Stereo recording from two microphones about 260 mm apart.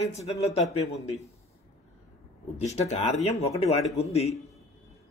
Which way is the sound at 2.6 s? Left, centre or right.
Left.